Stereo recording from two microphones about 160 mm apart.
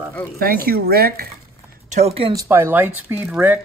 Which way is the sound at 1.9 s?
40° right (ahead or behind).